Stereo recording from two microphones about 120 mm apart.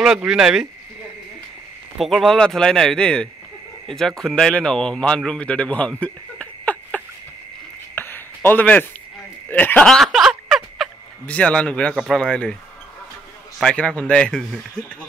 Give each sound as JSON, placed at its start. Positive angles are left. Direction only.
{"t": 0.0, "sound": "a man's voice", "side_deg": -5}
{"t": 2.0, "sound": "a man's voice", "side_deg": 0}
{"t": 7.9, "sound": "a sound", "side_deg": 15}
{"t": 9.5, "sound": "speech", "side_deg": 15}
{"t": 10.0, "sound": "a sound", "side_deg": 0}
{"t": 11.2, "sound": "speech", "side_deg": 10}
{"t": 11.9, "sound": "a man's voice", "side_deg": -5}
{"t": 12.2, "sound": "speech", "side_deg": 10}
{"t": 13.6, "sound": "speech", "side_deg": 10}